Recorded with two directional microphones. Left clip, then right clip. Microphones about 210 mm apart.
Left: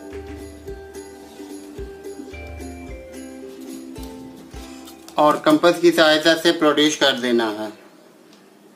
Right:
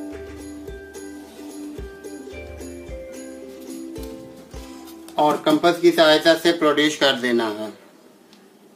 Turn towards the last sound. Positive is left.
turn(degrees=5)  # may be behind; listen again after turning